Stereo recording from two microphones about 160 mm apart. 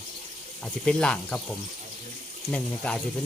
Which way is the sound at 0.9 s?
5° left (ahead or behind).